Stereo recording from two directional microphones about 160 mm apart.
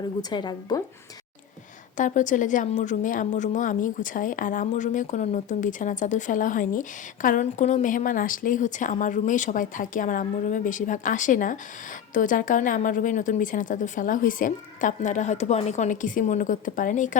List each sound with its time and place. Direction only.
0.2 s a woman's voice: 25° left (ahead or behind)
2.0 s a woman's voice: 50° left (ahead or behind)